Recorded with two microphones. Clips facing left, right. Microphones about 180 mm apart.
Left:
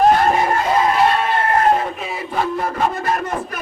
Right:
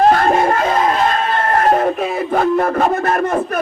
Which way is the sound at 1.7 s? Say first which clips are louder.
Right 5 dB; 50° right (ahead or behind).